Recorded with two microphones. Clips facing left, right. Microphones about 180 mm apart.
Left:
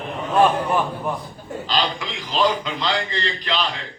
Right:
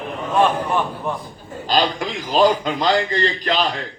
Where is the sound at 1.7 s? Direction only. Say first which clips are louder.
Right 5 dB; 45° right (ahead or behind).